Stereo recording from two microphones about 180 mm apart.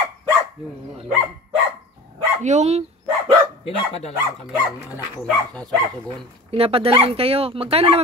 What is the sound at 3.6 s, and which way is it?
Speech, 35° left (ahead or behind).